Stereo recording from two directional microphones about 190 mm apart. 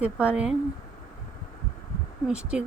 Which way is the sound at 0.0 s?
5° right (ahead or behind).